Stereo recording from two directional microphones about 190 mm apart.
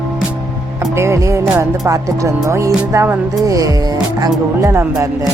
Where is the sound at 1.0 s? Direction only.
15° right (ahead or behind).